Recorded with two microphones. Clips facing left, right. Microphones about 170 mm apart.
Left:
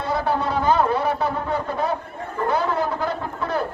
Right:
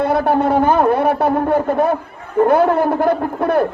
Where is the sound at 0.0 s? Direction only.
60° right (ahead or behind).